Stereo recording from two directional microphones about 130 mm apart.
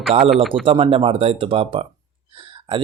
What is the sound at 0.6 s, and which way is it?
Speech, 45° right (ahead or behind).